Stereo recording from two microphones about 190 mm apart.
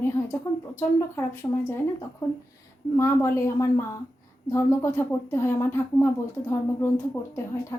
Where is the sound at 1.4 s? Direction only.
15° left (ahead or behind).